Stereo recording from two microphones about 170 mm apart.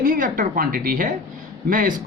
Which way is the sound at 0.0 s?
55° right (ahead or behind).